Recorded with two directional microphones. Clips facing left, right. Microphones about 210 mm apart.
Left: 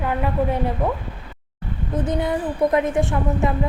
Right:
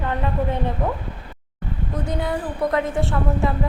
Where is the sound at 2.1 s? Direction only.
20° left (ahead or behind).